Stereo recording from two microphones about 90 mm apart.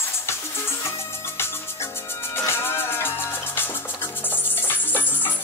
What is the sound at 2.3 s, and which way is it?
Music, 25° left (ahead or behind).